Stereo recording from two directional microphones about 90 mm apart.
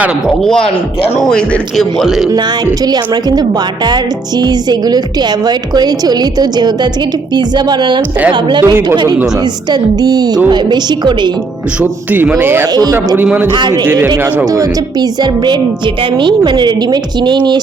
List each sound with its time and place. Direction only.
0.3 s speech: 5° left (ahead or behind)
2.8 s a woman's voice: 50° right (ahead or behind)
10.0 s a woman's voice: 50° right (ahead or behind)
11.8 s a man's voice: 20° right (ahead or behind)
13.5 s a woman's voice: 55° right (ahead or behind)
16.2 s a woman's voice: 60° right (ahead or behind)